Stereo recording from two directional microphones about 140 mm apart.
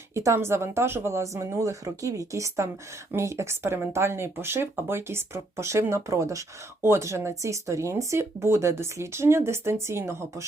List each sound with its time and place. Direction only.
0.1 s speech: 20° right (ahead or behind)